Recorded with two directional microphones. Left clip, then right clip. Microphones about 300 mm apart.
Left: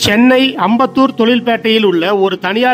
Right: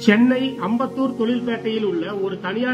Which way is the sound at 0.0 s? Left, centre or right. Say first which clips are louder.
Left 8 dB; left.